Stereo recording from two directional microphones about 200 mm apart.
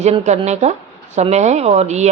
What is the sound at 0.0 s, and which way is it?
A woman's voice, 35° right (ahead or behind).